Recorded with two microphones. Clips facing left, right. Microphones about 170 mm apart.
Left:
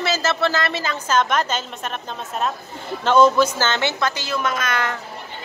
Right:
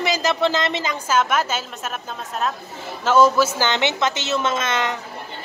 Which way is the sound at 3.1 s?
5° right (ahead or behind).